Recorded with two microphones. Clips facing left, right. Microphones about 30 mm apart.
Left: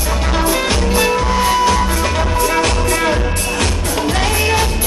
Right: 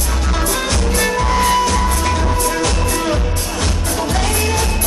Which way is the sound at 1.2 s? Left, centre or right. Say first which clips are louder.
Left 1 dB; centre.